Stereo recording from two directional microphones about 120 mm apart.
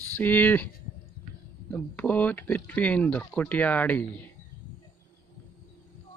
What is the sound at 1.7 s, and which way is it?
Speech, 15° left (ahead or behind).